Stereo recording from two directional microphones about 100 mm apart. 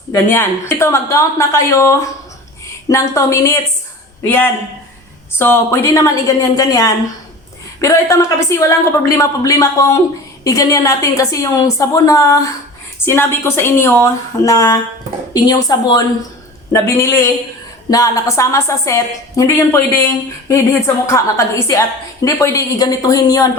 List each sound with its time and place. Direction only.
0.1 s a woman's voice: 25° left (ahead or behind)
13.1 s a woman's voice: 25° left (ahead or behind)
16.7 s a woman's voice: 30° left (ahead or behind)